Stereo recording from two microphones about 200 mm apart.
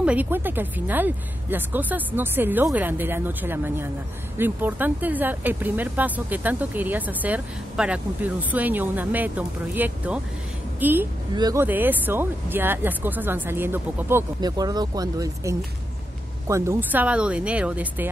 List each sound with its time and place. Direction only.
0.0 s speech: 5° right (ahead or behind)
11.3 s speech: 20° right (ahead or behind)
11.6 s speech: 10° right (ahead or behind)